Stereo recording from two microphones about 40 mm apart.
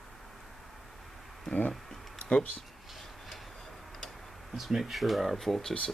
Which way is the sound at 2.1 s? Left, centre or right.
Left.